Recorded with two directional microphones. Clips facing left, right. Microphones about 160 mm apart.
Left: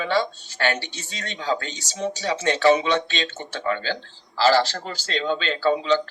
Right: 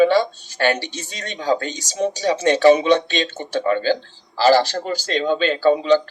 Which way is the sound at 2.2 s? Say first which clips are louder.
Right 5 dB; 35° right (ahead or behind).